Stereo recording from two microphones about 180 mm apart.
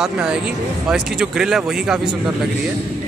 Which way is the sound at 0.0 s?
5° right (ahead or behind).